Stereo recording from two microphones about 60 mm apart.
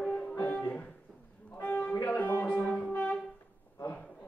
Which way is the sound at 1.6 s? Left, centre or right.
Left.